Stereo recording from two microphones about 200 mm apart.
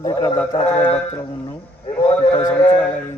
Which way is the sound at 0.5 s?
30° left (ahead or behind).